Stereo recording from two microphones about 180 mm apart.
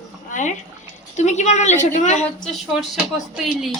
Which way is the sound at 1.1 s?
40° left (ahead or behind).